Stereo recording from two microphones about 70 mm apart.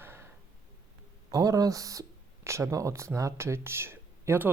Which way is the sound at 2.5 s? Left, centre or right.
Right.